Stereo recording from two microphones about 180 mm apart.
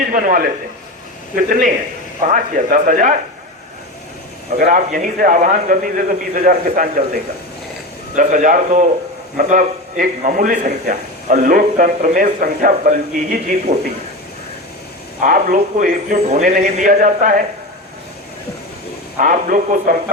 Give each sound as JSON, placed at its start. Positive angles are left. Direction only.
{"t": 0.0, "sound": "a man's voice", "side_deg": -50}
{"t": 4.5, "sound": "a man's voice", "side_deg": -55}
{"t": 8.1, "sound": "a man's voice", "side_deg": -45}
{"t": 15.2, "sound": "a man's voice", "side_deg": -50}
{"t": 19.2, "sound": "a man's voice", "side_deg": -50}